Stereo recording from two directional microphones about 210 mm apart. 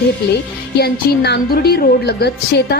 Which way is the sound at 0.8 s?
50° left (ahead or behind).